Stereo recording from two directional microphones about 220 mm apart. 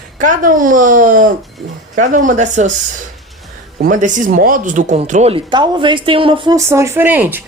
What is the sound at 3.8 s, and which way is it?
Speech, 35° right (ahead or behind).